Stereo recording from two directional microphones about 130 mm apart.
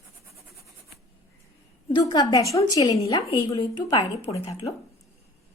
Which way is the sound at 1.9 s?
30° left (ahead or behind).